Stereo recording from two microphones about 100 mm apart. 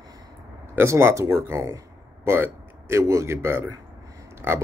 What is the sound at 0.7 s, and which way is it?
Speech, 25° right (ahead or behind).